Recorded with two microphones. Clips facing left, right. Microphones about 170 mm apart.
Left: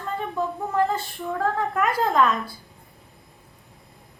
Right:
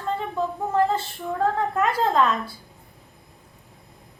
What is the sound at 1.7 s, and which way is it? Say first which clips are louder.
Speech: left 1 dB; 25° right (ahead or behind).